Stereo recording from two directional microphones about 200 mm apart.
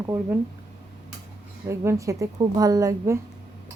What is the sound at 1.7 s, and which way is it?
Speech, 15° right (ahead or behind).